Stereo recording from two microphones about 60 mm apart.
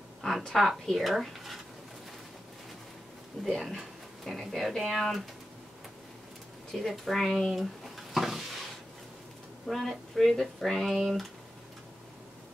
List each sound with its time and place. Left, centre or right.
0.2 s a woman's voice: centre
3.4 s speech: centre
6.7 s speech: centre
9.7 s speech: centre